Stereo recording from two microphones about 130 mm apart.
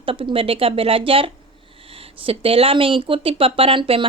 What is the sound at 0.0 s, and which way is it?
Speech, 40° right (ahead or behind).